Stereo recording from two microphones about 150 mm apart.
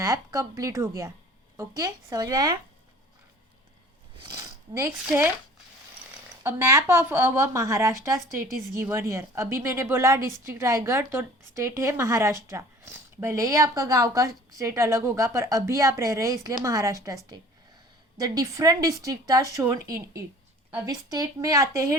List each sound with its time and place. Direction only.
0.0 s a woman's voice: 20° right (ahead or behind)
4.2 s a sound: 25° right (ahead or behind)
6.4 s a woman's voice: 15° right (ahead or behind)
18.2 s a woman's voice: 25° right (ahead or behind)
20.8 s a woman's voice: 25° right (ahead or behind)